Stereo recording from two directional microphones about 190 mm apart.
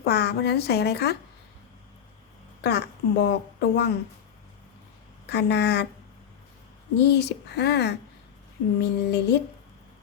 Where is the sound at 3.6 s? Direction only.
65° left (ahead or behind).